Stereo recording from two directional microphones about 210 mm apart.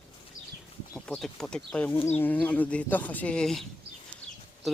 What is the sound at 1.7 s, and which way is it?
Speech, 5° left (ahead or behind).